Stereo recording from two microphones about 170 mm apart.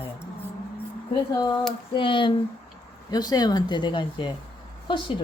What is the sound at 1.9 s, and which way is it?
Speech, 30° left (ahead or behind).